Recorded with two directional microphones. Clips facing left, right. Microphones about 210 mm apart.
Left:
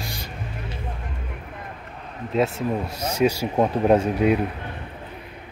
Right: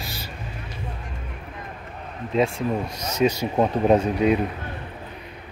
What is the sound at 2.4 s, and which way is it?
Speech, 5° left (ahead or behind).